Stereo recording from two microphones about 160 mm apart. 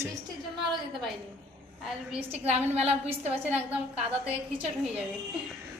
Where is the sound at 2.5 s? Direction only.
45° right (ahead or behind).